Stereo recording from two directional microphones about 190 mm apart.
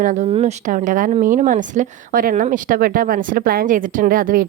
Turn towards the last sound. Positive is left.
turn(degrees=-50)  # may be behind; listen again after turning